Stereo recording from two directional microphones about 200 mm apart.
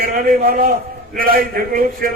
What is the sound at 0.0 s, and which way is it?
A man's voice, 45° right (ahead or behind).